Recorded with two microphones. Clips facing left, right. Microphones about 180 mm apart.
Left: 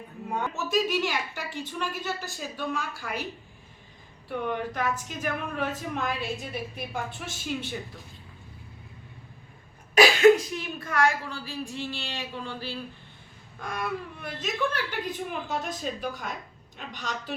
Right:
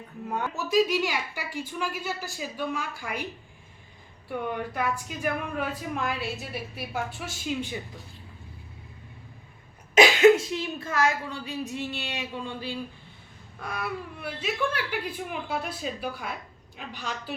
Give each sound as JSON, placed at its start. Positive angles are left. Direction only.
{"t": 0.3, "sound": "speech", "side_deg": -10}
{"t": 4.3, "sound": "speech", "side_deg": -10}
{"t": 9.9, "sound": "a woman's voice", "side_deg": -20}
{"t": 11.8, "sound": "a sound", "side_deg": 0}
{"t": 12.0, "sound": "a sound", "side_deg": -20}
{"t": 13.6, "sound": "speech", "side_deg": -5}